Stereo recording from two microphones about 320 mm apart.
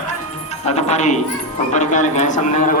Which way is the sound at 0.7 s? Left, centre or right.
Left.